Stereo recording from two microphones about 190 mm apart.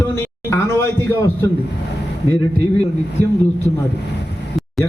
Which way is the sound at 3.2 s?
20° right (ahead or behind).